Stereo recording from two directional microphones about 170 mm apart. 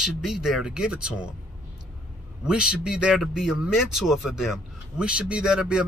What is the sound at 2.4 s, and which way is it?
Speech, 5° right (ahead or behind).